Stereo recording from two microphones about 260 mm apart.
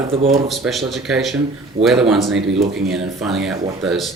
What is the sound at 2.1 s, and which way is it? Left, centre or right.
Speech, centre.